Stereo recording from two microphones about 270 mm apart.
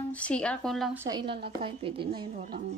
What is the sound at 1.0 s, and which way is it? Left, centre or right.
A woman's voice, centre.